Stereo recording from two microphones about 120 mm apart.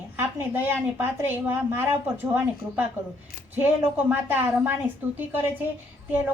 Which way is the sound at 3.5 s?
15° right (ahead or behind).